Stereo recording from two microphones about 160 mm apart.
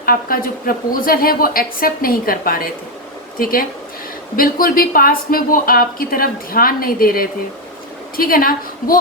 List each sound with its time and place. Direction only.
0.0 s speech: 65° left (ahead or behind)